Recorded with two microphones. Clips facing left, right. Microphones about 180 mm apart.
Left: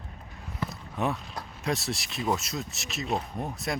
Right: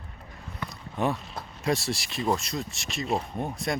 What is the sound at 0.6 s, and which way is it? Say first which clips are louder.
Speech: right 2 dB; centre (ahead or behind).